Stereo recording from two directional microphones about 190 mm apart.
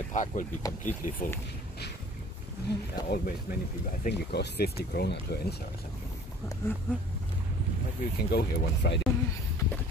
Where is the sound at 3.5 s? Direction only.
55° left (ahead or behind).